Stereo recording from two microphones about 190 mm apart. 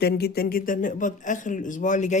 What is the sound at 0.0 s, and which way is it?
Speech, 55° left (ahead or behind).